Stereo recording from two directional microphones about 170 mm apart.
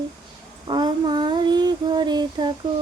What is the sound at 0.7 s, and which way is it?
Child singing, 25° right (ahead or behind).